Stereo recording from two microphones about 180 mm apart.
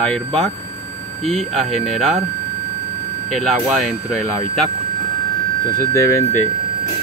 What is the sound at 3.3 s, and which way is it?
Speech, centre (ahead or behind).